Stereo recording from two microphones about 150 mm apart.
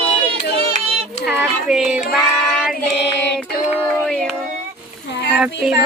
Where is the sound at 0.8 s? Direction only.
45° right (ahead or behind).